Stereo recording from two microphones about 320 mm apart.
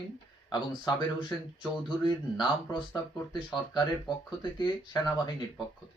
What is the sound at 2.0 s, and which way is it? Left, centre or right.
Speech, centre.